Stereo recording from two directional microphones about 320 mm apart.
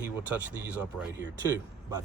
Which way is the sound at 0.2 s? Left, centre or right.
Centre.